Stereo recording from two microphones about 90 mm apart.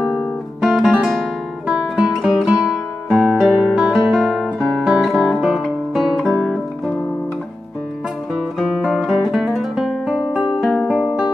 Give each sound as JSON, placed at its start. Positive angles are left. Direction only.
{"t": 0.2, "sound": "guitar", "side_deg": 5}
{"t": 1.7, "sound": "music", "side_deg": -10}
{"t": 3.1, "sound": "music", "side_deg": 0}
{"t": 3.7, "sound": "music", "side_deg": 5}
{"t": 5.0, "sound": "guitar", "side_deg": -5}
{"t": 8.5, "sound": "guitar", "side_deg": 0}
{"t": 10.6, "sound": "music", "side_deg": 5}